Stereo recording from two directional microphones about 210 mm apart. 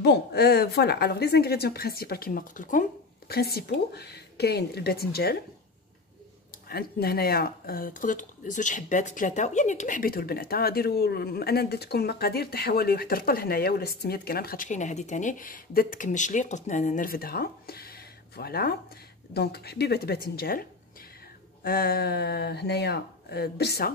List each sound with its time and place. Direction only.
0.0 s speech: 50° left (ahead or behind)
6.7 s speech: 45° left (ahead or behind)
21.6 s speech: 45° left (ahead or behind)